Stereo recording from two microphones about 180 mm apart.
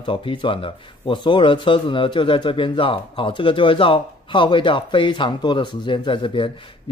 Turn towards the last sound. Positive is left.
turn(degrees=30)  # may be behind; listen again after turning